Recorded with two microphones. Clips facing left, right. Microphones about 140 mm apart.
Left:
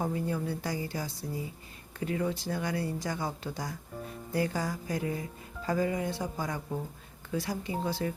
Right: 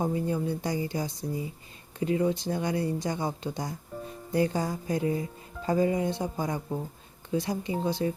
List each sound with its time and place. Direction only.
0.0 s speech: 20° right (ahead or behind)